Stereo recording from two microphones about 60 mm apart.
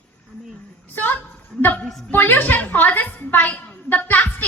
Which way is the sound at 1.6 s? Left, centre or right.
Left.